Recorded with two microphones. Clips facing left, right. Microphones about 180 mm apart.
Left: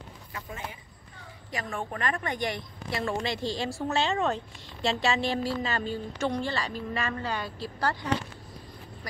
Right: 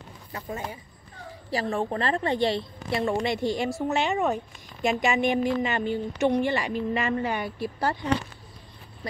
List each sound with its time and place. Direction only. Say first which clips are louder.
0.3 s a woman's voice: right 6 dB; 35° right (ahead or behind)